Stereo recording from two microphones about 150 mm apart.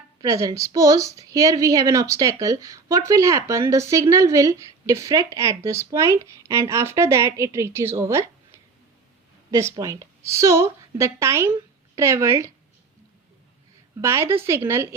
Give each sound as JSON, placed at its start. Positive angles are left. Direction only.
{"t": 0.2, "sound": "speech", "side_deg": -25}
{"t": 14.0, "sound": "speech", "side_deg": -20}